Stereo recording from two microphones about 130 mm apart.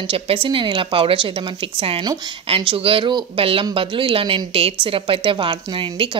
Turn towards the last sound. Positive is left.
turn(degrees=-40)  # may be behind; listen again after turning